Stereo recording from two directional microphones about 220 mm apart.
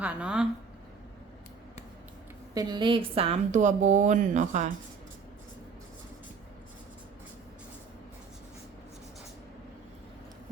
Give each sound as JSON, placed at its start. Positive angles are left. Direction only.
{"t": 0.0, "sound": "speech", "side_deg": -5}
{"t": 2.6, "sound": "speech", "side_deg": -20}